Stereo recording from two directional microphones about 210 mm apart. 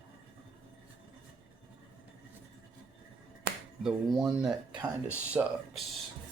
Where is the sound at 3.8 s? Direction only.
Centre (ahead or behind).